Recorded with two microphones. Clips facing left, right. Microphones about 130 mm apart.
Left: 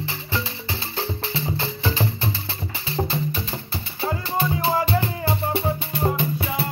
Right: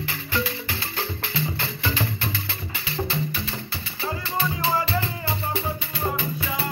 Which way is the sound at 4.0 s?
50° left (ahead or behind).